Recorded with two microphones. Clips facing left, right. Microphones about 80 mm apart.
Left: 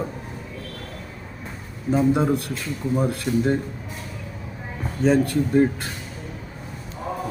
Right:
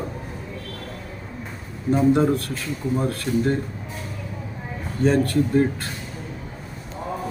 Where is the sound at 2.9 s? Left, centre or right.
Centre.